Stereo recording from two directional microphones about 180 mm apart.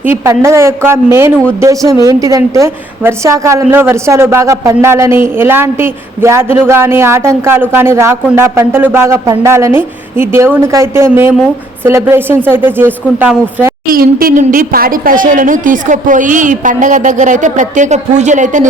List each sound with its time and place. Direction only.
0.0 s a woman's voice: 15° right (ahead or behind)
13.9 s a woman's voice: 55° right (ahead or behind)